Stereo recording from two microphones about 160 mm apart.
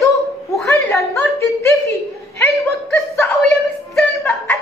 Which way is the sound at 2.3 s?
15° left (ahead or behind).